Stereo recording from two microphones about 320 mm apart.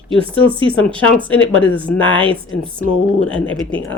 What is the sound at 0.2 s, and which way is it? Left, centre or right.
Speech, centre.